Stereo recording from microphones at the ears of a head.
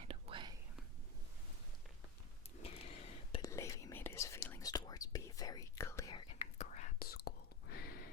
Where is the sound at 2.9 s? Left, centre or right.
Left.